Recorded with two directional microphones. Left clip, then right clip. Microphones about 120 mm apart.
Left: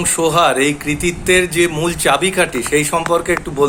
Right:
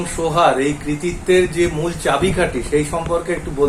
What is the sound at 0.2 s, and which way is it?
A man's voice, 50° left (ahead or behind).